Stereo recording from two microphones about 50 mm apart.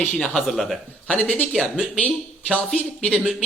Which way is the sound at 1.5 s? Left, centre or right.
Centre.